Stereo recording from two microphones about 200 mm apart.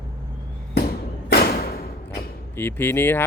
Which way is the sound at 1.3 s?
50° left (ahead or behind).